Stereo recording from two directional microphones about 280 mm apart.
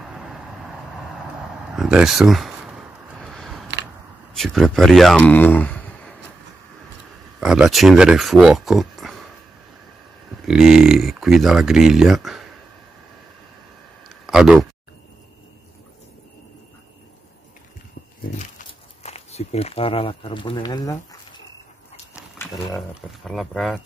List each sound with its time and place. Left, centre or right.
0.0 s vehicle: centre
3.2 s a sound: centre
7.3 s speech: centre
10.4 s speech: centre
14.0 s a sound: centre
18.4 s speech: left
22.4 s speech: centre